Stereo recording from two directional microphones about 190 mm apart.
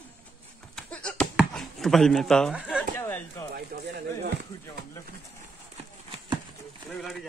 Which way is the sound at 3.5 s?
60° right (ahead or behind).